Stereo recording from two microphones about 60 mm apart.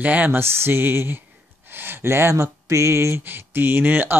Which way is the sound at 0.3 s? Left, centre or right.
Right.